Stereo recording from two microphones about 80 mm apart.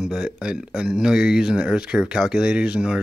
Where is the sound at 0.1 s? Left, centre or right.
Centre.